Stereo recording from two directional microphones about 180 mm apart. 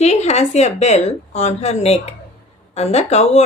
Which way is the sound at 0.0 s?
35° left (ahead or behind).